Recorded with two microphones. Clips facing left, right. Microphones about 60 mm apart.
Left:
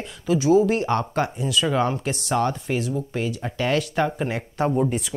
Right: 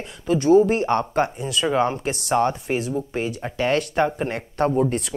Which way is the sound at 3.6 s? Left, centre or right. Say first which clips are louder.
Right 2 dB; centre.